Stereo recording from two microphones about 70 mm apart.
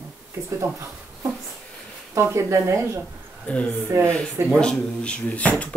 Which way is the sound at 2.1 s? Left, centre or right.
Right.